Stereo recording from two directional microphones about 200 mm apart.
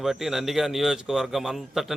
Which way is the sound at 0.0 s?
Centre (ahead or behind).